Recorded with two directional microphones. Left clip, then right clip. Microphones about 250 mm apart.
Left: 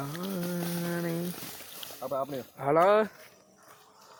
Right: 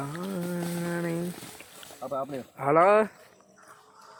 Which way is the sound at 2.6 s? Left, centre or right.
Centre.